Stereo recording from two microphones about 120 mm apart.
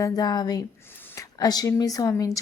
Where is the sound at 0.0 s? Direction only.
35° left (ahead or behind).